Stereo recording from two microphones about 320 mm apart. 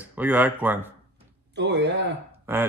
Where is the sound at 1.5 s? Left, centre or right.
Right.